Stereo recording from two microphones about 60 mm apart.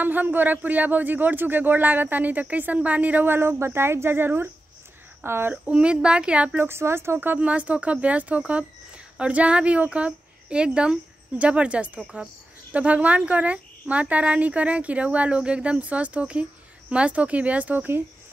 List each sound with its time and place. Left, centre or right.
0.0 s a child's voice: right
5.5 s speech: centre
6.6 s speech: right
7.3 s speech: right
12.7 s speech: right